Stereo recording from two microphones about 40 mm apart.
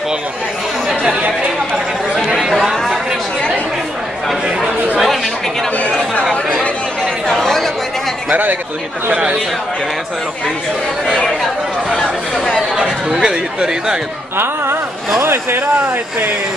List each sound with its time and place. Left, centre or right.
7.2 s chatter: centre
8.3 s speech: right
9.1 s speech: right
11.9 s speech: centre
13.2 s speech: centre
14.3 s speech: right